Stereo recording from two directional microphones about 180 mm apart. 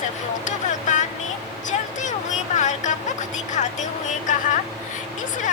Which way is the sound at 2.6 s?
40° left (ahead or behind).